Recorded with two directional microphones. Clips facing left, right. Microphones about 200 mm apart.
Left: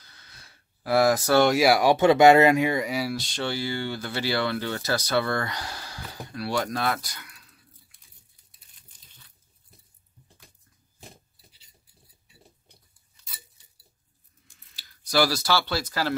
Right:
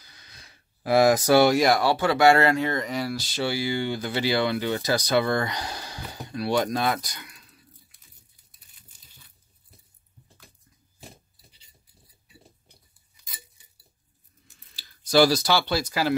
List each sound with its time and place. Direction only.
0.0 s a sound: 15° right (ahead or behind)
1.4 s speech: 5° left (ahead or behind); by 7.4 s 20° right (ahead or behind)
14.5 s speech: 25° right (ahead or behind)